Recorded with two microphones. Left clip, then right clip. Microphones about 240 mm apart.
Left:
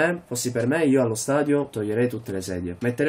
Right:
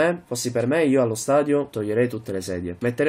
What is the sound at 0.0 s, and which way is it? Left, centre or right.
Speech, centre.